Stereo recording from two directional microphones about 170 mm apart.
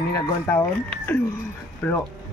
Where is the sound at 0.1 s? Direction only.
15° left (ahead or behind).